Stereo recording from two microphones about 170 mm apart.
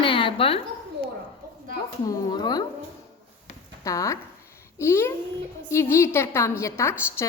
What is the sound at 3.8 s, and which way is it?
A woman's voice, 20° left (ahead or behind).